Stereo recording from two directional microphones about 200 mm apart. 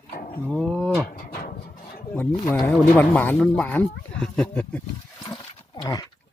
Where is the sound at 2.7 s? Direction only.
5° left (ahead or behind).